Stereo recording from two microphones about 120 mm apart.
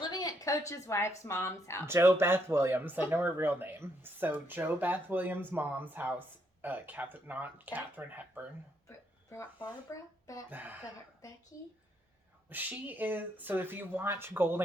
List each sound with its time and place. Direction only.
0.0 s a sound: 35° left (ahead or behind)
1.2 s speech: 20° left (ahead or behind)
1.9 s speech: 20° right (ahead or behind)
8.9 s a sound: 25° left (ahead or behind)
9.9 s speech: 30° left (ahead or behind)
10.5 s speech: 15° right (ahead or behind)
12.5 s speech: 15° right (ahead or behind)